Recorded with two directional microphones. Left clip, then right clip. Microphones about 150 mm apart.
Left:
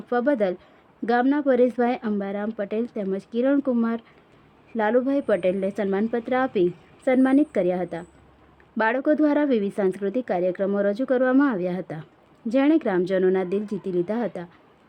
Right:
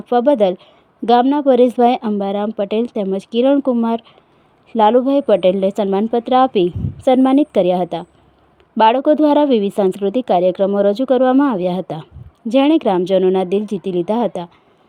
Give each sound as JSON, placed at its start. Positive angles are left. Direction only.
{"t": 0.1, "sound": "a woman's voice", "side_deg": -30}